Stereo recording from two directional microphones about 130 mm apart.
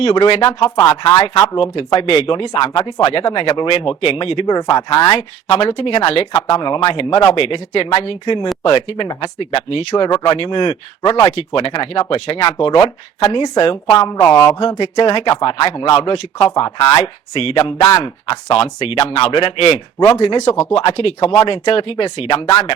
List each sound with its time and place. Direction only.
0.0 s speech: 45° left (ahead or behind)
0.6 s speech: 25° left (ahead or behind); by 4.5 s 45° left (ahead or behind)
4.5 s speech: 30° left (ahead or behind)
5.1 s speech: 45° left (ahead or behind)
11.3 s speech: 45° left (ahead or behind)
14.2 s speech: 20° left (ahead or behind)
15.0 s speech: 45° left (ahead or behind)
20.4 s speech: 55° left (ahead or behind); by 22.7 s 40° left (ahead or behind)